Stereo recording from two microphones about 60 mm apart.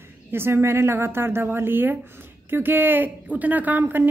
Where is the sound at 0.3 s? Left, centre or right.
Right.